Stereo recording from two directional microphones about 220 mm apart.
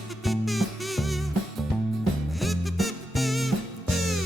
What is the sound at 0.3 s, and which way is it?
Music, centre (ahead or behind).